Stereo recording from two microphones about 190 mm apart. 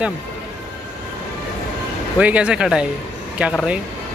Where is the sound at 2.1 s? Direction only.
5° right (ahead or behind).